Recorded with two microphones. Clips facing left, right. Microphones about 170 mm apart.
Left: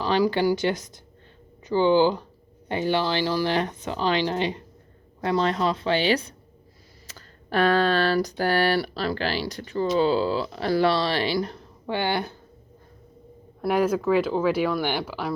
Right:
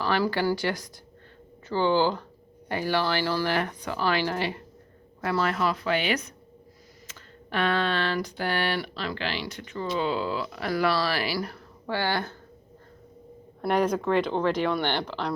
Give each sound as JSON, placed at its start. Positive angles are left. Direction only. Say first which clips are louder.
{"t": 0.0, "sound": "speech", "louder": "left 4 dB", "side_deg": 15}
{"t": 13.6, "sound": "speech", "louder": "left 2 dB", "side_deg": 5}